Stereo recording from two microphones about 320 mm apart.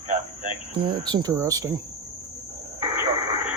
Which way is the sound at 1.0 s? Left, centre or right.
Centre.